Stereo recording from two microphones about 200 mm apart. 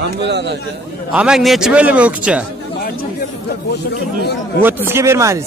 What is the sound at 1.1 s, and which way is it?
A man's voice, 5° right (ahead or behind).